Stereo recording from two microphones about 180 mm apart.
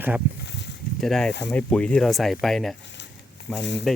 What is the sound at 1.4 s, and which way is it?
Speech, 15° left (ahead or behind).